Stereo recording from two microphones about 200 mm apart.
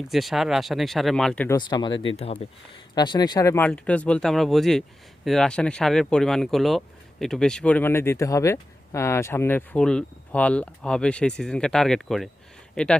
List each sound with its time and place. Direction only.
0.1 s speech: centre (ahead or behind)
1.5 s speech: 20° left (ahead or behind); by 13.0 s 5° left (ahead or behind)